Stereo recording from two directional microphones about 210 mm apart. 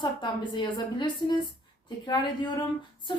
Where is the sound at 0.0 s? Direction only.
20° left (ahead or behind).